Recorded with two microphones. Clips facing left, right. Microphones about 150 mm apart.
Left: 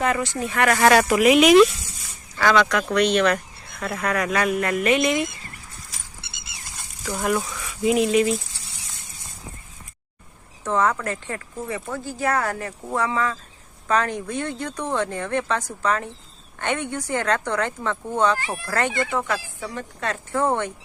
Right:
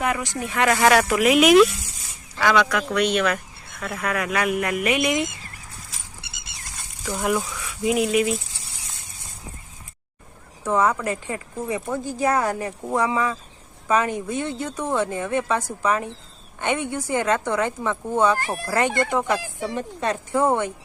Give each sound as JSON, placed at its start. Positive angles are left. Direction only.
{"t": 0.0, "sound": "speech", "side_deg": -15}
{"t": 0.9, "sound": "speech", "side_deg": 0}
{"t": 6.2, "sound": "a sound", "side_deg": -15}
{"t": 7.2, "sound": "speech", "side_deg": -10}
{"t": 10.6, "sound": "speech", "side_deg": -10}
{"t": 18.3, "sound": "speech", "side_deg": -45}
{"t": 19.1, "sound": "speech", "side_deg": -15}